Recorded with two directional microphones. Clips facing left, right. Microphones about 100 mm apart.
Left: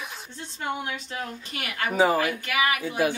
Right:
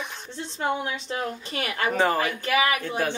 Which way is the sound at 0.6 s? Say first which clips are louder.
Right 3 dB; 35° right (ahead or behind).